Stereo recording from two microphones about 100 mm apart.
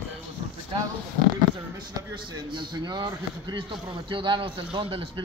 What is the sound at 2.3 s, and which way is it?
Speech, 50° right (ahead or behind).